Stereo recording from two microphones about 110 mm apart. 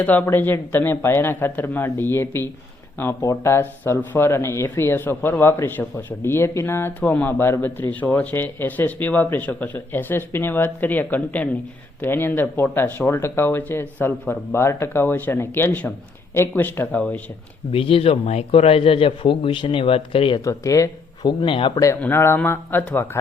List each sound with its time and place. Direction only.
0.0 s speech: 15° left (ahead or behind)
17.7 s speech: 60° left (ahead or behind)
20.4 s speech: 30° left (ahead or behind)
21.2 s a man's voice: 45° left (ahead or behind)
22.0 s speech: 20° left (ahead or behind)